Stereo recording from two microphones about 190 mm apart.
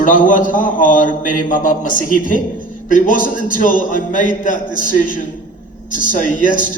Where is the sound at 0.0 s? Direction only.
45° left (ahead or behind).